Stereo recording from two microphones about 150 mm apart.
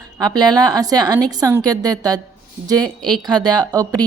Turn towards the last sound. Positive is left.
turn(degrees=-25)  # may be behind; listen again after turning